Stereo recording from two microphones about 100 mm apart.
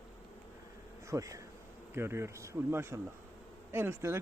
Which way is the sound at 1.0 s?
35° right (ahead or behind).